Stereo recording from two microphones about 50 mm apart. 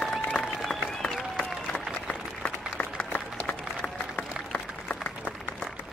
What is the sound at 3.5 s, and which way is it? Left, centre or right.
Applause, centre.